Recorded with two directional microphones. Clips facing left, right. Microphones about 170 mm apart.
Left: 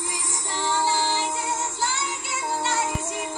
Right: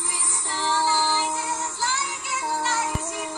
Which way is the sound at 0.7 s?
20° left (ahead or behind).